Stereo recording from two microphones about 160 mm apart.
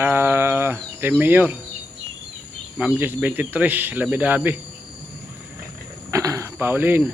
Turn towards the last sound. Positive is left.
turn(degrees=-10)  # may be behind; listen again after turning